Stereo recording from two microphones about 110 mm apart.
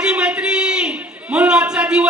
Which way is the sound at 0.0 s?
10° right (ahead or behind).